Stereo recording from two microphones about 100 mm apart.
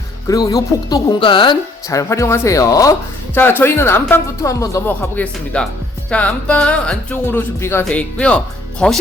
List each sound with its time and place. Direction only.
0.3 s speech: 35° left (ahead or behind)
1.2 s a woman's voice: 55° left (ahead or behind)
1.9 s speech: 30° left (ahead or behind)
3.3 s speech: 20° left (ahead or behind)
7.9 s speech: 10° left (ahead or behind)